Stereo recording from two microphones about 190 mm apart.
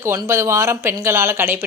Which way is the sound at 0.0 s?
15° right (ahead or behind).